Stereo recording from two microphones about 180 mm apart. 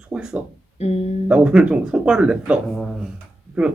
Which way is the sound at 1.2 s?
5° right (ahead or behind).